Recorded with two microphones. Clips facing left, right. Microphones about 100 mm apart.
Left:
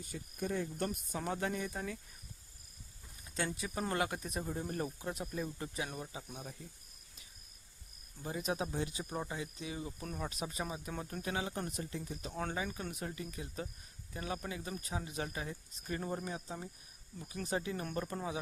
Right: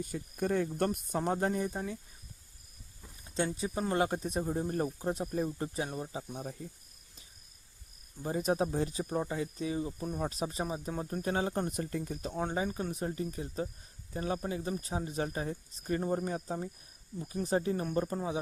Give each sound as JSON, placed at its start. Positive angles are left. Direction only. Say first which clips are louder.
{"t": 0.0, "sound": "speech", "louder": "right 6 dB", "side_deg": -55}
{"t": 0.9, "sound": "speech", "louder": "right 7 dB", "side_deg": -40}
{"t": 3.3, "sound": "speech", "louder": "right 5 dB", "side_deg": -25}
{"t": 8.2, "sound": "speech", "louder": "right 7 dB", "side_deg": -40}
{"t": 10.9, "sound": "speech", "louder": "right 6 dB", "side_deg": -20}
{"t": 11.2, "sound": "speech", "louder": "right 7 dB", "side_deg": -40}
{"t": 11.7, "sound": "speech", "louder": "right 6 dB", "side_deg": -50}
{"t": 12.3, "sound": "speech", "louder": "right 4 dB", "side_deg": -20}
{"t": 12.5, "sound": "speech", "louder": "right 6 dB", "side_deg": -35}